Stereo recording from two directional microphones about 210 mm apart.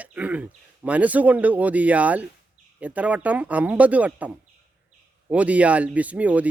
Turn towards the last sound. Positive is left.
turn(degrees=-5)  # may be behind; listen again after turning